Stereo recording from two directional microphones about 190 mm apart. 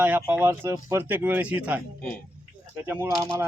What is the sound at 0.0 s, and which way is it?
Speech, 10° right (ahead or behind).